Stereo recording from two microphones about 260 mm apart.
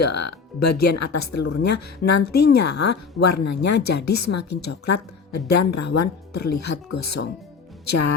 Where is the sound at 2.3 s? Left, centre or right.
Left.